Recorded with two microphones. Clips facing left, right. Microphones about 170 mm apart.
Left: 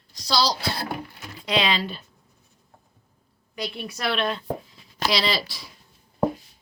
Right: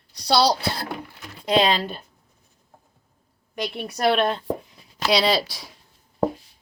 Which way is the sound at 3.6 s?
50° right (ahead or behind).